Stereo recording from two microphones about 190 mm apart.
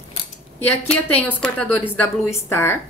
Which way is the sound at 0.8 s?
10° left (ahead or behind).